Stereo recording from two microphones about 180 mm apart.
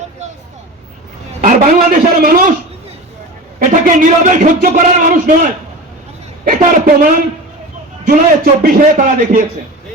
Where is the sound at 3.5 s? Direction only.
50° right (ahead or behind).